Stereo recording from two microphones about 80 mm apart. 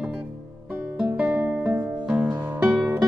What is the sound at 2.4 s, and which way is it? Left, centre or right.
Music, right.